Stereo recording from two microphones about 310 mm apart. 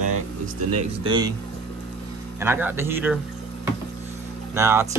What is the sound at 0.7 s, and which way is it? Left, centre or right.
Speech, centre.